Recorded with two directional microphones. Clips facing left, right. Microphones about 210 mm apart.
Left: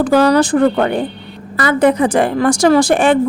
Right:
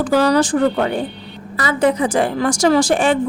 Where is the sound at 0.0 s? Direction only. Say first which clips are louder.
Left 3 dB; 60° left (ahead or behind).